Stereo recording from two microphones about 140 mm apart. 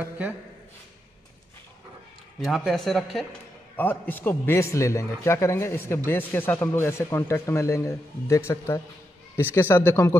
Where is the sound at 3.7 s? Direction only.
15° left (ahead or behind).